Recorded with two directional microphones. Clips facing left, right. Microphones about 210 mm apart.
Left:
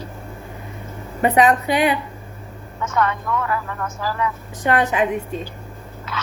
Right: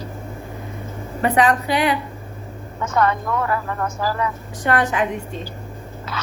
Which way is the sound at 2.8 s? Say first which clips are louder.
Right 2 dB; 35° right (ahead or behind).